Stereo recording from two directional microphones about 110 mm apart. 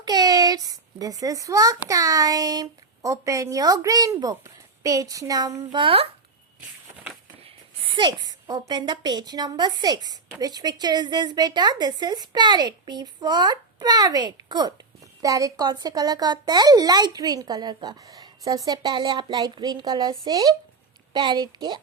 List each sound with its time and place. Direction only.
0.0 s a child's voice: 35° right (ahead or behind)
5.8 s a child's voice: 60° right (ahead or behind)
7.4 s a woman's voice: 50° right (ahead or behind)